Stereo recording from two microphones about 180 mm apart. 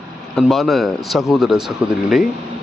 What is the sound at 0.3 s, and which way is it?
A man's voice, centre (ahead or behind).